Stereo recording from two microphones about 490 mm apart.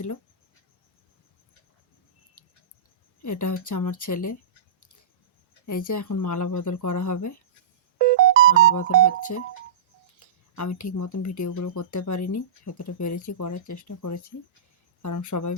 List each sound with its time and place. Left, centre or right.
3.2 s speech: left
5.6 s speech: left
7.9 s music: centre
8.7 s speech: left
10.2 s speech: left